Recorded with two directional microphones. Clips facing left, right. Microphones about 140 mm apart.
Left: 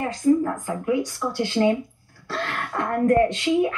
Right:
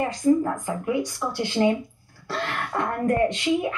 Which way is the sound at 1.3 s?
15° right (ahead or behind).